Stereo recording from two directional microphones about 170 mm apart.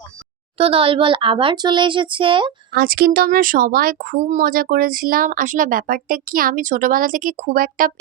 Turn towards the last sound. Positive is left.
turn(degrees=-55)  # may be behind; listen again after turning